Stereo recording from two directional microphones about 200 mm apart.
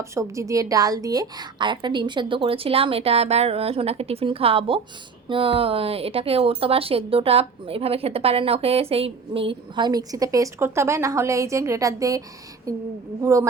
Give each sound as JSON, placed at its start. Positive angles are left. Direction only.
{"t": 0.1, "sound": "speech", "side_deg": -15}
{"t": 13.2, "sound": "speech", "side_deg": -15}